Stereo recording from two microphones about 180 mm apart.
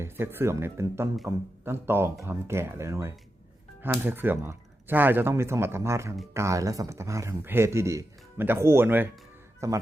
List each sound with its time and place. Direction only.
0.0 s speech: 10° right (ahead or behind)